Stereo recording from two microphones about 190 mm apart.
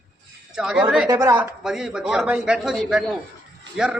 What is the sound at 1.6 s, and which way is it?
A man's voice, 5° right (ahead or behind).